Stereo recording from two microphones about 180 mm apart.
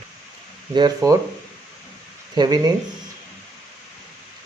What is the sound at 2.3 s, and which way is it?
Speech, 20° right (ahead or behind).